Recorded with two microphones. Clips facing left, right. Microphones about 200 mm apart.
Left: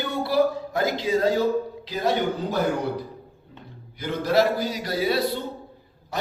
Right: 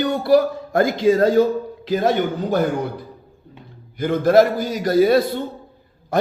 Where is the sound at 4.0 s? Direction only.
50° right (ahead or behind).